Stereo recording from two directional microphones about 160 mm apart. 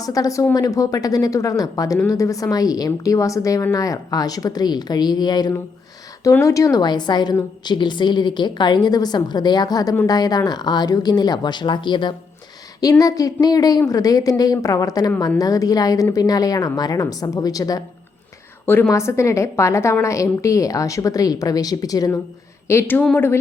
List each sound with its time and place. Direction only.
0.0 s a woman's voice: 20° left (ahead or behind)